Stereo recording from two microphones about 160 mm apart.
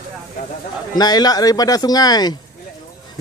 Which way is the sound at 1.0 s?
25° left (ahead or behind).